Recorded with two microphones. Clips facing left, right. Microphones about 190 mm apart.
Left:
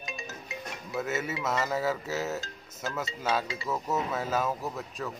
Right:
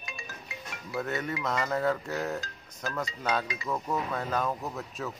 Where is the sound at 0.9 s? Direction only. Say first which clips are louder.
Even; 5° left (ahead or behind).